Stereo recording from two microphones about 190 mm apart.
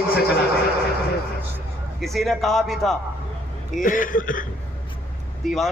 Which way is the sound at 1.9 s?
Centre (ahead or behind).